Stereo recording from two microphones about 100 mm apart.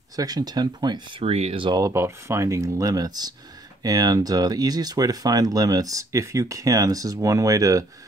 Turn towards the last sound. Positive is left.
turn(degrees=-35)  # may be behind; listen again after turning